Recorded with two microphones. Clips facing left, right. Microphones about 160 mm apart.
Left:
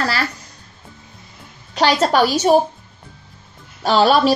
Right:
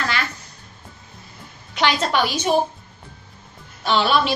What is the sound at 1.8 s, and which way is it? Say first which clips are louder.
Speech: left 5 dB; 40° left (ahead or behind).